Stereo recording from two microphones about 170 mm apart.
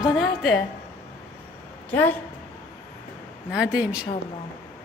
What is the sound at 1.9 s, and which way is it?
Speech, 10° left (ahead or behind).